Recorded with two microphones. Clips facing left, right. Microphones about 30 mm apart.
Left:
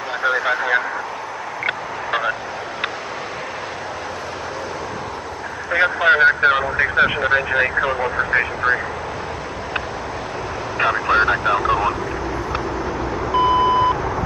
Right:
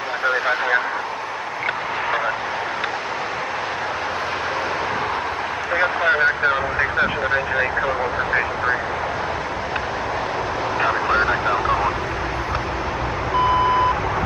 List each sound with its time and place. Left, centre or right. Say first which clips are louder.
0.2 s vehicle: left 1 dB; centre
6.0 s speech: left 6 dB; centre
10.8 s vehicle: left 3 dB; centre
13.4 s reversing beeps: left 2 dB; centre